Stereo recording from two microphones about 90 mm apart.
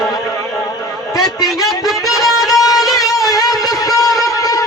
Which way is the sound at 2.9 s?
45° left (ahead or behind).